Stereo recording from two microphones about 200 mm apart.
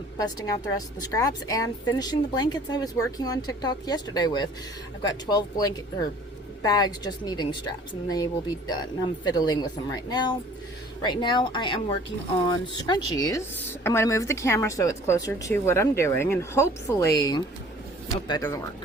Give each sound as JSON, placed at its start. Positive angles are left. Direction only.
{"t": 0.2, "sound": "a woman's voice", "side_deg": 20}